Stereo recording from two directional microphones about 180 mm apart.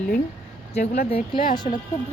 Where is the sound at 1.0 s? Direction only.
35° left (ahead or behind).